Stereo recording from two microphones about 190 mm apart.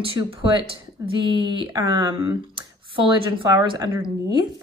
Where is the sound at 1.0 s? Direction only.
15° right (ahead or behind).